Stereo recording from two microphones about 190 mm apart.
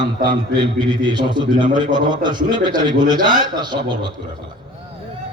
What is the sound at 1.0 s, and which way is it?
Speech, 25° right (ahead or behind).